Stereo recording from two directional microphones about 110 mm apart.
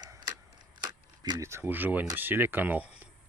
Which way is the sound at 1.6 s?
15° right (ahead or behind).